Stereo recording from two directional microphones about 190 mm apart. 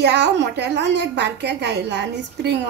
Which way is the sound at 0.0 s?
65° right (ahead or behind).